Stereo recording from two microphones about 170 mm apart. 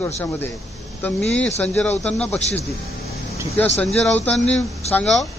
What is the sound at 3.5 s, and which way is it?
Speech, 10° left (ahead or behind).